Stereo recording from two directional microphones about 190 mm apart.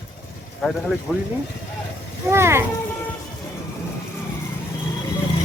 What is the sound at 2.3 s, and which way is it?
Speech, 15° right (ahead or behind).